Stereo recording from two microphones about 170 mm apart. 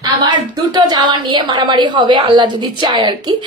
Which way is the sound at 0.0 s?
25° right (ahead or behind).